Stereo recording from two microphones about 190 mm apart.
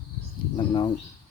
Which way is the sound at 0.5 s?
25° left (ahead or behind).